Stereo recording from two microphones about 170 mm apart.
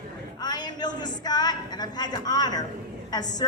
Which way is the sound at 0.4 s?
25° left (ahead or behind).